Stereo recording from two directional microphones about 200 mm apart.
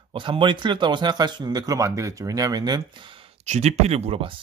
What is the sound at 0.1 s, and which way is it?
Speech, 25° right (ahead or behind).